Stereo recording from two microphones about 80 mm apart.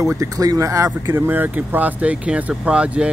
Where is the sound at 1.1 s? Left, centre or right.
Right.